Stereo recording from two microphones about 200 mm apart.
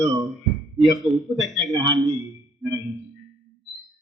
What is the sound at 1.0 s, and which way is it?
Speech, centre (ahead or behind).